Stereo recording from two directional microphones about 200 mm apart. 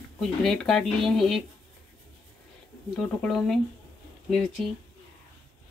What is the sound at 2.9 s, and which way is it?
Speech, 5° left (ahead or behind).